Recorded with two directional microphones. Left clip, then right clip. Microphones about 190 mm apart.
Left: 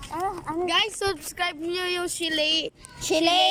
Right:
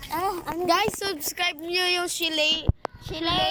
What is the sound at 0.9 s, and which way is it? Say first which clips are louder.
Speech: left 1 dB; 5° left (ahead or behind).